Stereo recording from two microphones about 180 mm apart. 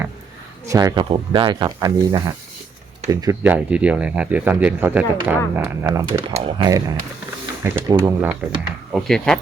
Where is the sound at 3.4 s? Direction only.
10° right (ahead or behind).